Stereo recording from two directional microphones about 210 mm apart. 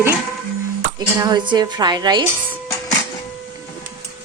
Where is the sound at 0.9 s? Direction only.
20° right (ahead or behind).